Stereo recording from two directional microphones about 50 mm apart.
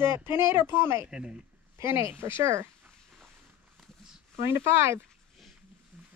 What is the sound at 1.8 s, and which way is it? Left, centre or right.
Speech, right.